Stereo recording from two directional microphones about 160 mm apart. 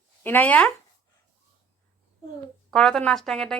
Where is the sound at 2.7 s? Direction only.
5° left (ahead or behind).